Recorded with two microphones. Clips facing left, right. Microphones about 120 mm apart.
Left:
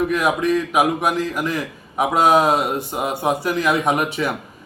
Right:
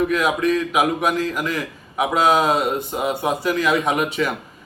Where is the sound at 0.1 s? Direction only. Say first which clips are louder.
Left 1 dB; 10° left (ahead or behind).